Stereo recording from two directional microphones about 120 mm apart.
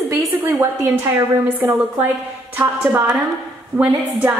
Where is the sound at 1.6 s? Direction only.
15° right (ahead or behind).